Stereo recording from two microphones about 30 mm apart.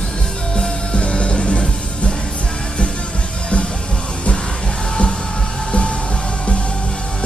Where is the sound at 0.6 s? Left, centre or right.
Left.